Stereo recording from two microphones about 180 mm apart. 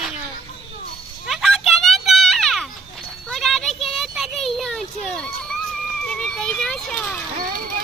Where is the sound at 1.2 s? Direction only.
Centre (ahead or behind).